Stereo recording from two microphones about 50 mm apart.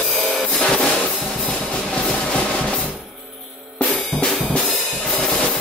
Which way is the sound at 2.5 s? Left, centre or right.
Centre.